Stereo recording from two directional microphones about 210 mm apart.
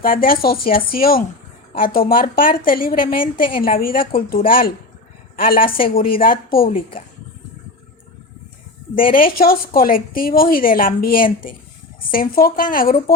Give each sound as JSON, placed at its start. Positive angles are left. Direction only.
{"t": 0.0, "sound": "a woman's voice", "side_deg": 45}
{"t": 6.6, "sound": "a woman's voice", "side_deg": 25}
{"t": 9.0, "sound": "a woman's voice", "side_deg": 40}